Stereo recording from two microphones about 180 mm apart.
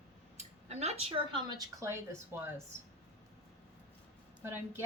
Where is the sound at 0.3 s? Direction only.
35° right (ahead or behind); by 2.5 s 15° right (ahead or behind).